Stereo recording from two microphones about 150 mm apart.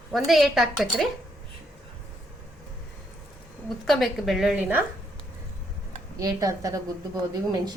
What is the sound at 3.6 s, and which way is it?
A woman's voice, centre (ahead or behind).